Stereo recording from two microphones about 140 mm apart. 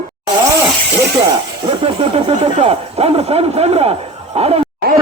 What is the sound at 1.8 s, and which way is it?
Speech, 45° right (ahead or behind).